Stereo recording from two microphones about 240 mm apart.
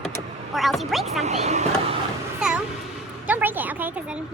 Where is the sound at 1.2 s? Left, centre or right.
Right.